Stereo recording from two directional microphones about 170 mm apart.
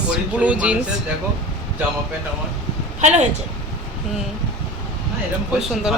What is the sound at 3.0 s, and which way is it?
Speech, 45° right (ahead or behind).